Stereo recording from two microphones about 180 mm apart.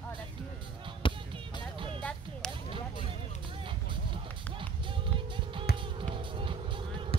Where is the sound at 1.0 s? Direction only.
30° left (ahead or behind).